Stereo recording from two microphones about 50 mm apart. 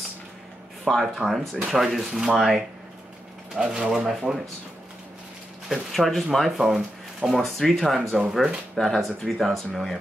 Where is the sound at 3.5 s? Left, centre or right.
Centre.